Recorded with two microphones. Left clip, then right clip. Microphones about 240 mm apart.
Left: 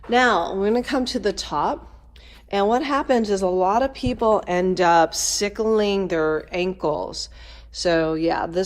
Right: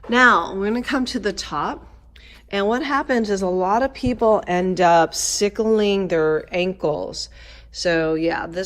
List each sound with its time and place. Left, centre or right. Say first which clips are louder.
0.1 s speech: right 3 dB; centre
4.2 s speech: right 2 dB; centre
4.4 s speech: right 2 dB; centre